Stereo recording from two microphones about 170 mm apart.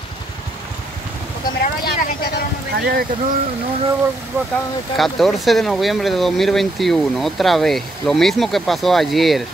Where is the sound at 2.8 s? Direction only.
60° right (ahead or behind).